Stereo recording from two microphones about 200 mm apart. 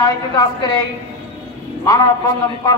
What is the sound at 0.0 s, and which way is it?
Speech, 20° left (ahead or behind).